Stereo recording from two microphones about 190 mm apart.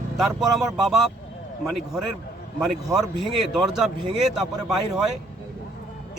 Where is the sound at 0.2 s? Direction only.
Centre (ahead or behind).